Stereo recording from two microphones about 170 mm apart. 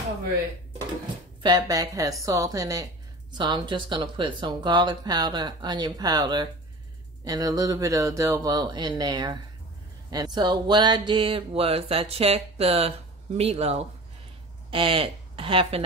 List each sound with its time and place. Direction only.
1.4 s a woman's voice: 25° right (ahead or behind)